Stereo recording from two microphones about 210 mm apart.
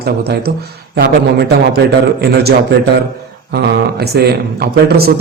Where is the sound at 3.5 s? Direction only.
50° right (ahead or behind).